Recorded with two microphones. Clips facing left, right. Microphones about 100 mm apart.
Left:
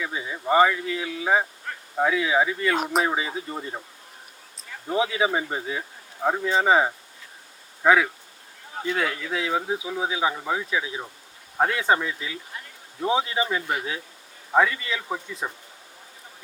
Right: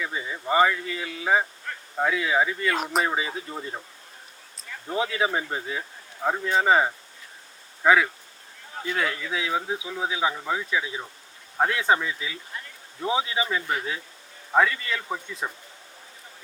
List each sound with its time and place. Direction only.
0.0 s speech: 5° left (ahead or behind)
4.9 s speech: 5° left (ahead or behind)
13.7 s speech: 10° left (ahead or behind)